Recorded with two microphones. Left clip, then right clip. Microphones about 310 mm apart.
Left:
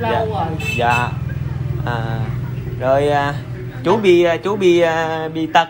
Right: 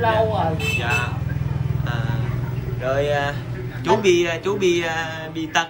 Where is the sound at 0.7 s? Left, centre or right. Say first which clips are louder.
Left 11 dB; centre.